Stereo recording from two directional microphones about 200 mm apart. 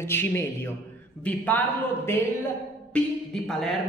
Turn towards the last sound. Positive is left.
turn(degrees=0)  # may be behind; listen again after turning